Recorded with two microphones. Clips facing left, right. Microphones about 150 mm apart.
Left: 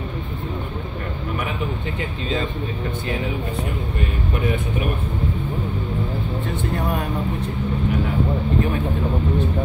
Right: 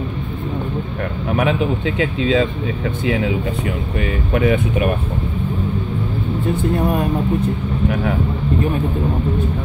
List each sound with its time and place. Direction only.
2.0 s speech: 90° right
4.3 s speech: 90° right